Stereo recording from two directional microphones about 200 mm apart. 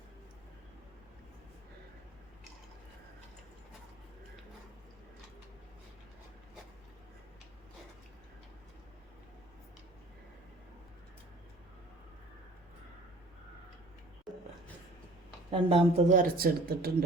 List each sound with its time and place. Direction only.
15.4 s speech: 25° right (ahead or behind)
16.1 s speech: 45° right (ahead or behind)